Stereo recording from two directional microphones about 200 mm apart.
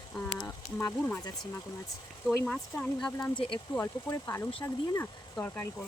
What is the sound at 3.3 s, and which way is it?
Speech, 25° left (ahead or behind).